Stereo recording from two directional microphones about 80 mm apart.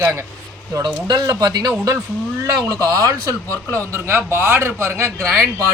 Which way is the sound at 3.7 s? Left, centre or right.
Right.